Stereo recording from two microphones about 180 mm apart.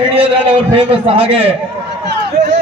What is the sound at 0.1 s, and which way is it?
A man's voice, 30° right (ahead or behind).